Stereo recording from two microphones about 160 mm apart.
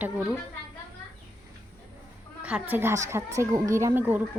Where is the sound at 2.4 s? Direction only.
10° right (ahead or behind).